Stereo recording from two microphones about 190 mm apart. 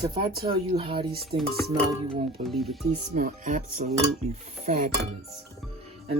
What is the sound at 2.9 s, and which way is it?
Dishes, 40° right (ahead or behind).